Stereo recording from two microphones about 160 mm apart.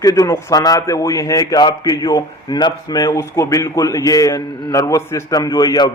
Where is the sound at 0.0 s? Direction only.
20° left (ahead or behind).